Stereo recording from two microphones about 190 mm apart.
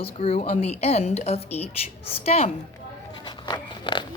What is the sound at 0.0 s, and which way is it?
A woman's voice, 30° left (ahead or behind).